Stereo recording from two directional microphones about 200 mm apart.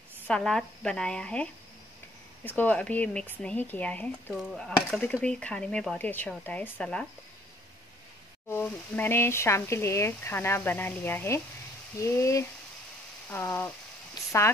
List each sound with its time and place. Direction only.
0.3 s speech: 5° left (ahead or behind)
8.5 s speech: 10° left (ahead or behind)